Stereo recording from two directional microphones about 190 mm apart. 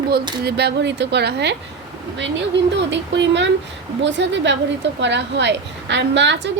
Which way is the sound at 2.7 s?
65° right (ahead or behind).